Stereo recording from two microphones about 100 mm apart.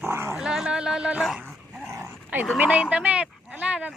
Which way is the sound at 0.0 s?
25° right (ahead or behind).